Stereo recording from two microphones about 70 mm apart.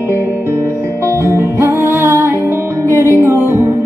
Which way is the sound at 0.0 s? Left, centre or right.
Right.